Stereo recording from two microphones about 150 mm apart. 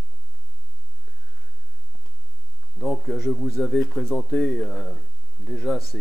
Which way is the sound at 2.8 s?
5° left (ahead or behind).